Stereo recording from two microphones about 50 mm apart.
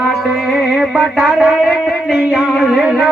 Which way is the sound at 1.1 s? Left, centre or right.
Centre.